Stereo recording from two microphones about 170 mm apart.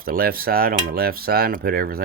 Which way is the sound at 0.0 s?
60° right (ahead or behind).